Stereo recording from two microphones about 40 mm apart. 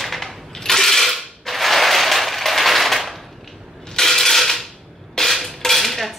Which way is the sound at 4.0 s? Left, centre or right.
Centre.